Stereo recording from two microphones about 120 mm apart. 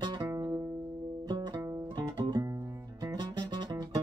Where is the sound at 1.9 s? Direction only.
35° right (ahead or behind).